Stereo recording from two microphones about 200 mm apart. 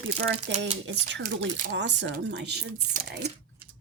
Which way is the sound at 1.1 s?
65° right (ahead or behind).